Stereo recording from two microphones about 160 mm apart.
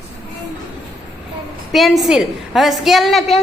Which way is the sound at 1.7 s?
Centre (ahead or behind).